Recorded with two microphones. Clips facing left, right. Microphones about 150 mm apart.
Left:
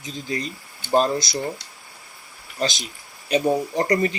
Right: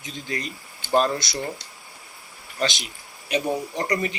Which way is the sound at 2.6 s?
35° left (ahead or behind).